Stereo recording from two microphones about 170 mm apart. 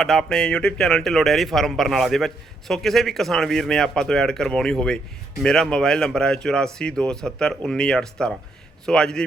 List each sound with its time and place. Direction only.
0.0 s speech: 5° left (ahead or behind)